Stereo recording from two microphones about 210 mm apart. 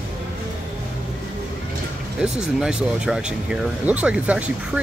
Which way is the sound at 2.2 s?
5° right (ahead or behind).